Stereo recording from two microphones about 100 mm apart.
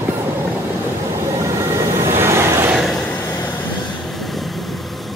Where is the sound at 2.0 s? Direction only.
25° right (ahead or behind).